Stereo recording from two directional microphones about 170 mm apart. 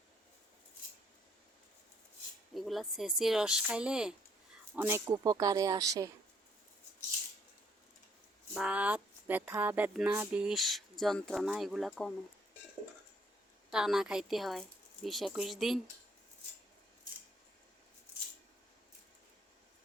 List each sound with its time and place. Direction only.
2.6 s speech: centre (ahead or behind); by 6.1 s 20° right (ahead or behind)
8.5 s speech: 5° right (ahead or behind)
13.7 s speech: centre (ahead or behind)